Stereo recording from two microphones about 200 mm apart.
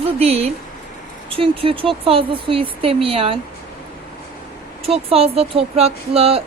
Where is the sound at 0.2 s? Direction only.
30° right (ahead or behind).